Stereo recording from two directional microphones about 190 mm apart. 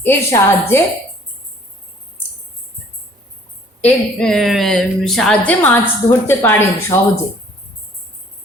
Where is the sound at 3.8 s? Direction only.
5° left (ahead or behind).